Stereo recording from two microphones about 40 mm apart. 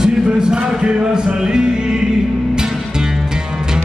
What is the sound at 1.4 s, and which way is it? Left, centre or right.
Music, centre.